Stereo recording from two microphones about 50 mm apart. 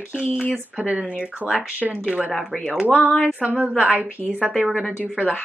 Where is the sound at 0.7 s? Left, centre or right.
Right.